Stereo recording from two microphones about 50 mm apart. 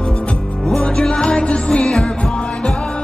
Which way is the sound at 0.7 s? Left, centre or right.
Centre.